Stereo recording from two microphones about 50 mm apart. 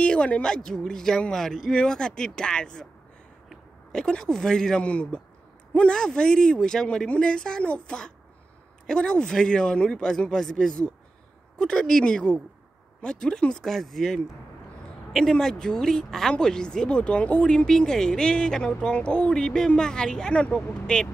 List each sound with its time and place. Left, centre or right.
0.0 s a woman's voice: left
3.9 s a woman's voice: centre
5.9 s speech: centre